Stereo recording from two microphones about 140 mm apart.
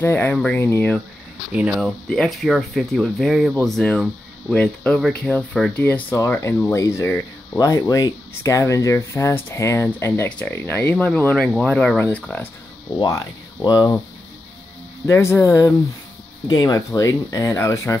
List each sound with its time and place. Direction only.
0.0 s speech: 15° left (ahead or behind)
1.5 s speech: 10° right (ahead or behind)
1.8 s speech: 5° left (ahead or behind)
13.0 s speech: 25° left (ahead or behind)
15.0 s speech: 20° left (ahead or behind)